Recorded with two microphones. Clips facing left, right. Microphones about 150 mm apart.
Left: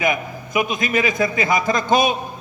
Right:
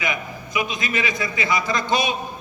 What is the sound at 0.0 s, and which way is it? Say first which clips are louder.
A man's voice: left 6 dB; 50° left (ahead or behind).